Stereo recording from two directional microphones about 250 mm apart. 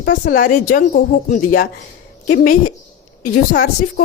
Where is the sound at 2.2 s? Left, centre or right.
Left.